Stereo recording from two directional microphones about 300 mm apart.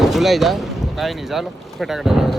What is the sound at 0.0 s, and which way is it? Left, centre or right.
Speech, centre.